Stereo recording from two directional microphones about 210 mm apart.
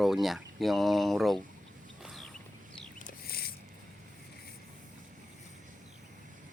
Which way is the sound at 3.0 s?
45° left (ahead or behind).